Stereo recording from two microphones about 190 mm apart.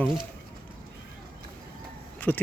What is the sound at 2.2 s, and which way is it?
Speech, 10° left (ahead or behind).